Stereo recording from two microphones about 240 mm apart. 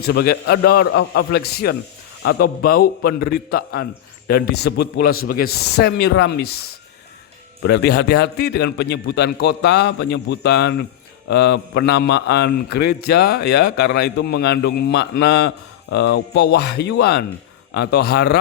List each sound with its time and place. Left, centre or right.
0.0 s a man's voice: left